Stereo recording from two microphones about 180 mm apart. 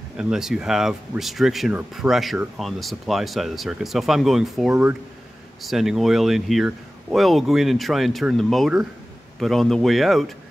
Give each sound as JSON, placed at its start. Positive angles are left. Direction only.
{"t": 0.2, "sound": "speech", "side_deg": -5}